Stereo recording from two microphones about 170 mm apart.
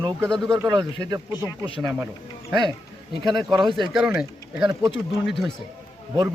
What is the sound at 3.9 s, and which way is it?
Speech, 5° right (ahead or behind).